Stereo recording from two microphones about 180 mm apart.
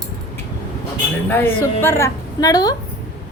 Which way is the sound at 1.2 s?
10° left (ahead or behind).